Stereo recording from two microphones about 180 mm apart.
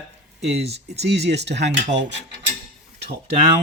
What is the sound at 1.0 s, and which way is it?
Speech, 65° right (ahead or behind).